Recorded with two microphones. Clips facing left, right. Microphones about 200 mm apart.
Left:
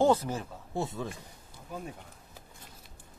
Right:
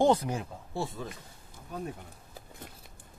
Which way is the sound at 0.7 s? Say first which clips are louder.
Left 1 dB; 20° left (ahead or behind).